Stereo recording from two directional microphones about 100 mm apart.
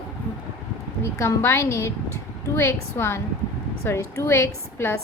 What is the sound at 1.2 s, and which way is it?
A woman's voice, 30° left (ahead or behind).